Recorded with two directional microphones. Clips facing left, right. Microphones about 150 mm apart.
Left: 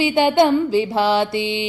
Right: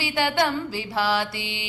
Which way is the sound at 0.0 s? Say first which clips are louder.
Left 8 dB; 20° left (ahead or behind).